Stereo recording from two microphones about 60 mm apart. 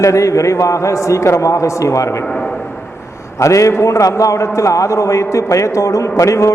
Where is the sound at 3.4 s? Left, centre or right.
Left.